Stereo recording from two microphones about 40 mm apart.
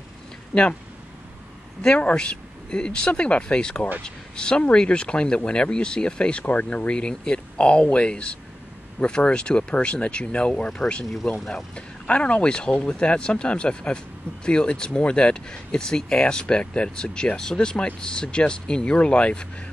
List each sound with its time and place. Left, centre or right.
1.8 s speech: left
11.2 s speech: centre
11.7 s speech: left